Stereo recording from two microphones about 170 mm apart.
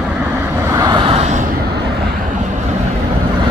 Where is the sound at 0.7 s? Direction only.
20° right (ahead or behind); by 1.4 s 40° right (ahead or behind).